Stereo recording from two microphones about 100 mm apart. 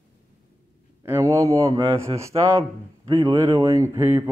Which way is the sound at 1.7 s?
60° right (ahead or behind).